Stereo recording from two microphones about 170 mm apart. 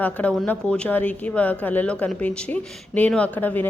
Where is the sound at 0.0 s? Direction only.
10° left (ahead or behind).